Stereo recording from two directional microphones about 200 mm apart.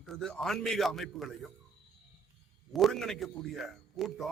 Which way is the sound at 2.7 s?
Centre (ahead or behind).